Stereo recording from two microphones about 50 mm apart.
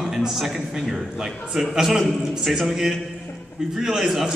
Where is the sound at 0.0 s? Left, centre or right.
Centre.